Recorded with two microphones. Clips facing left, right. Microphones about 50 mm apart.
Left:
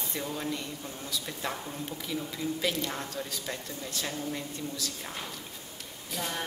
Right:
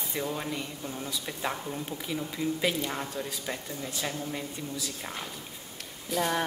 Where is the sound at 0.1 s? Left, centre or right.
Centre.